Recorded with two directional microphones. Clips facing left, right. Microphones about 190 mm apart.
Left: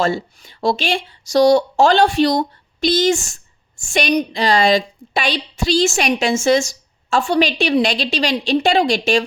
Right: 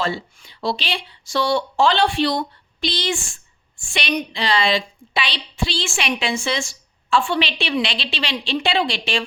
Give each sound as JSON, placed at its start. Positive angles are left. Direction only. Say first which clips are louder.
{"t": 0.0, "sound": "speech", "louder": "left 6 dB", "side_deg": 45}